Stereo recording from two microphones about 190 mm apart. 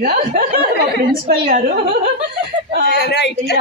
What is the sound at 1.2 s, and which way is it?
Speech, 50° right (ahead or behind).